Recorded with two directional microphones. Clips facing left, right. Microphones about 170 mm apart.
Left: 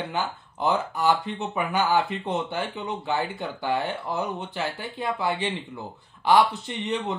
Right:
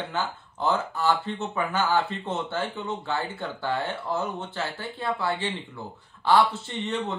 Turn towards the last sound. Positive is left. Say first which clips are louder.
# left 1 dB
turn(degrees=15)  # may be behind; listen again after turning